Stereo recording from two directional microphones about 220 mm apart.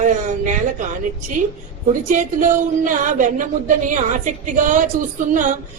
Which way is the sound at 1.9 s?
35° right (ahead or behind).